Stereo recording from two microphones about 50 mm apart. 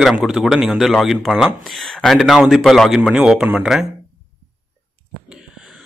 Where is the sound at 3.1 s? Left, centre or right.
Centre.